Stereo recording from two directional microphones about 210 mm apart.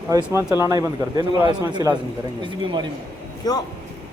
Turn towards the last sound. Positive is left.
turn(degrees=20)  # may be behind; listen again after turning